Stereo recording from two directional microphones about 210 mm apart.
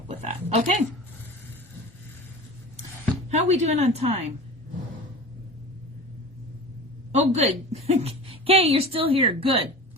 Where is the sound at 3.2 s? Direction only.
30° right (ahead or behind).